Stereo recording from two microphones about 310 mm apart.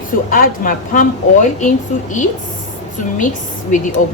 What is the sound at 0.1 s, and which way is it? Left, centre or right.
A woman's voice, left.